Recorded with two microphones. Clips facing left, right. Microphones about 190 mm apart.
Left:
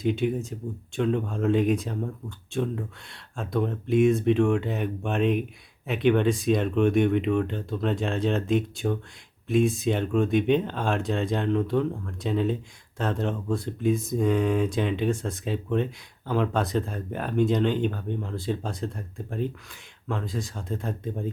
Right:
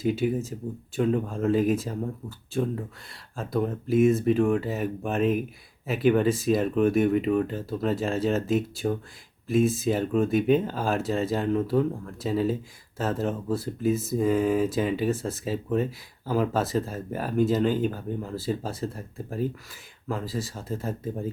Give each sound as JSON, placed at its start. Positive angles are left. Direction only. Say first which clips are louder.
{"t": 0.0, "sound": "speech", "louder": "even", "side_deg": -5}